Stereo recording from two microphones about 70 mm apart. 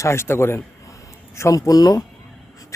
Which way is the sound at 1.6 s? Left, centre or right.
Left.